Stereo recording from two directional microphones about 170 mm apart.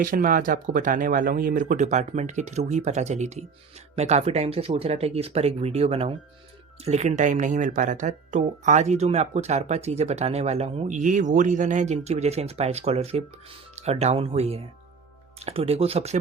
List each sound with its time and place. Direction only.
0.0 s speech: 55° right (ahead or behind); by 16.1 s 35° right (ahead or behind)